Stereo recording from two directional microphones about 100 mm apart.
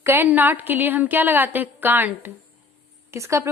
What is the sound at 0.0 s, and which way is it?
A woman's voice, 20° right (ahead or behind).